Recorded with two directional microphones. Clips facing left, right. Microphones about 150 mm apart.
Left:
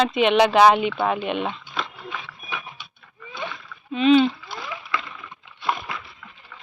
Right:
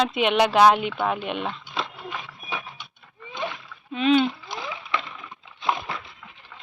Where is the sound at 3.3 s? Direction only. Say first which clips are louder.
Right 2 dB; 15° right (ahead or behind).